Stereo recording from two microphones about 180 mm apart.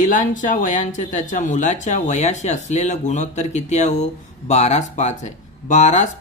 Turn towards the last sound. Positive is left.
turn(degrees=40)  # may be behind; listen again after turning